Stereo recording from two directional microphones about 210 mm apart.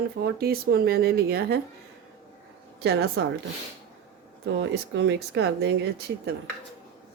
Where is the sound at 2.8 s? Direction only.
50° right (ahead or behind).